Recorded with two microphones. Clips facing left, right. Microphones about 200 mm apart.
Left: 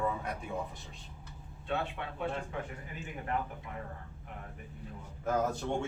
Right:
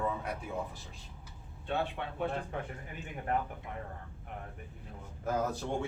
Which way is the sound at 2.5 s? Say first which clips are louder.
Even; 50° right (ahead or behind).